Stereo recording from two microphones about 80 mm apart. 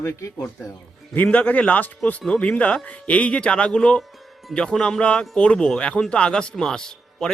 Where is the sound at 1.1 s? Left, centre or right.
Centre.